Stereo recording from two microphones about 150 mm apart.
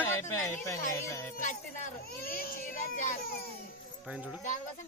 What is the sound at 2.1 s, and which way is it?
Speech, 80° left.